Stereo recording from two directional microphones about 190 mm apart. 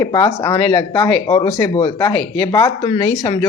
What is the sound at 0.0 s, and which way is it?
Speech, 15° left (ahead or behind).